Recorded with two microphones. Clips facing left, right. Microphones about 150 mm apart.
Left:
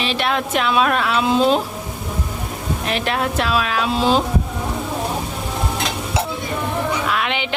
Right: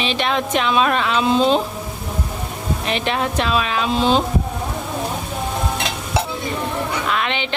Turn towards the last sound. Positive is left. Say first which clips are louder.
# even
turn(degrees=5)  # may be behind; listen again after turning